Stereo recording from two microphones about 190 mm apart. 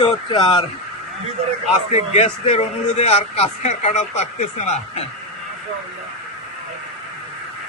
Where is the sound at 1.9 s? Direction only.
35° left (ahead or behind).